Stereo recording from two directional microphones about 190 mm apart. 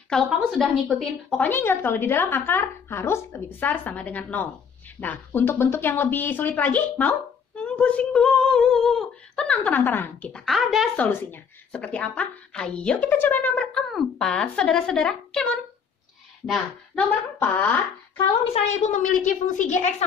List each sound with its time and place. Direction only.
0.1 s a woman's voice: centre (ahead or behind)
18.5 s a woman's voice: 35° left (ahead or behind)